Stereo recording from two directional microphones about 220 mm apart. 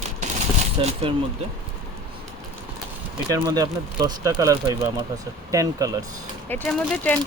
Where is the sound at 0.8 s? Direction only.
25° right (ahead or behind).